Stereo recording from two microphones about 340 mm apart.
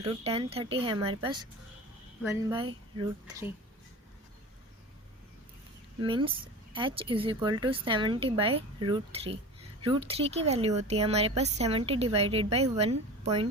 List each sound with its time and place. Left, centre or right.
0.0 s speech: centre
6.0 s speech: centre